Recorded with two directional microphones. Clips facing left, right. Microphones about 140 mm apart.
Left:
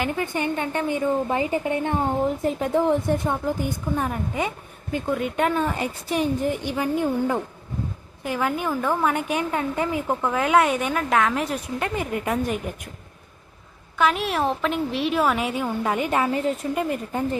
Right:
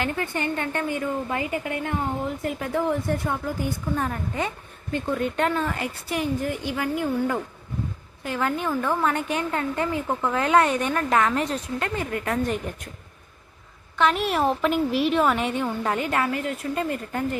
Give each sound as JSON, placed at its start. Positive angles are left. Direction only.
{"t": 0.0, "sound": "a woman's voice", "side_deg": 15}
{"t": 11.5, "sound": "a woman's voice", "side_deg": 15}
{"t": 14.0, "sound": "a woman's voice", "side_deg": 0}